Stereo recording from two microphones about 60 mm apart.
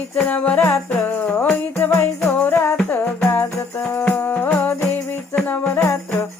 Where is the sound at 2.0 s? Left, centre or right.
Left.